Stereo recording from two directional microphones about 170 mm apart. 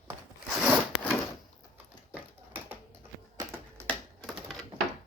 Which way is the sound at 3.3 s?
15° right (ahead or behind).